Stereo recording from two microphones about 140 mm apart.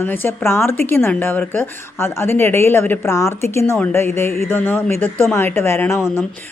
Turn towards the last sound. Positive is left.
turn(degrees=15)  # may be behind; listen again after turning